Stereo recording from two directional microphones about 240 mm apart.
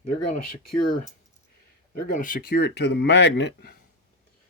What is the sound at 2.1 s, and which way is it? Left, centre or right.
Speech, left.